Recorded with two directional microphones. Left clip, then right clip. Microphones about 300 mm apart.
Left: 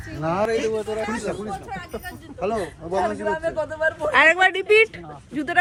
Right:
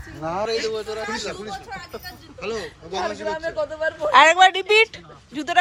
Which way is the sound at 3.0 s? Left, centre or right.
Left.